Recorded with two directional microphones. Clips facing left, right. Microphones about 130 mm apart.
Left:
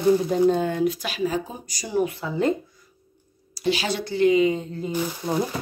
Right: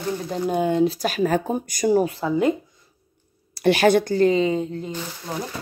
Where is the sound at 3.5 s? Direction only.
60° right (ahead or behind); by 4.6 s 30° right (ahead or behind).